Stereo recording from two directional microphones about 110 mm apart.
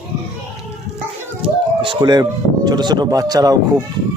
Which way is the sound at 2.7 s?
40° right (ahead or behind).